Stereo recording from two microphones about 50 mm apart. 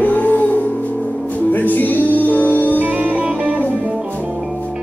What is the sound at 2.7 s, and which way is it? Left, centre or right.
Music, right.